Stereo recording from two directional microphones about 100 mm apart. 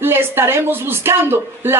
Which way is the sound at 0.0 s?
20° right (ahead or behind).